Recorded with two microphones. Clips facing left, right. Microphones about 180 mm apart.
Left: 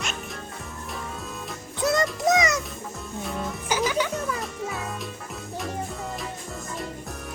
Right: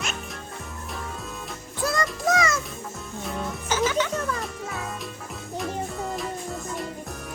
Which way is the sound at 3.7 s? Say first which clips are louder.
Right 1 dB; 10° left (ahead or behind).